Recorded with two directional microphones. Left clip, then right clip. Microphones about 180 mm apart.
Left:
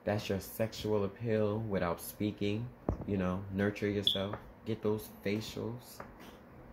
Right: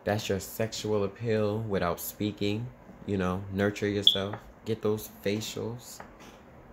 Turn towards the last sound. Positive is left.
turn(degrees=-30)  # may be behind; listen again after turning